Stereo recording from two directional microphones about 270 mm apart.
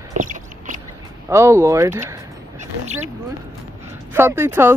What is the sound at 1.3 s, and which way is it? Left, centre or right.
Speech, centre.